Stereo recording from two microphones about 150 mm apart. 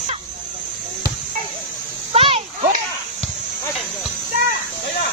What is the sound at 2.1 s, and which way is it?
Children playing, 40° right (ahead or behind).